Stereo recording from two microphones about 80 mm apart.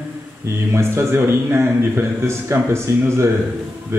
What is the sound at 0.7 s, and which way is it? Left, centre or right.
A man's voice, right.